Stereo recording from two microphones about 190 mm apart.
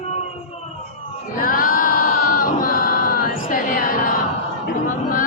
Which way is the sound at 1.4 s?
45° left (ahead or behind).